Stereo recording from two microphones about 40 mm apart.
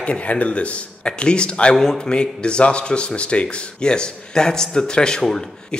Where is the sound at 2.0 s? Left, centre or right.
Left.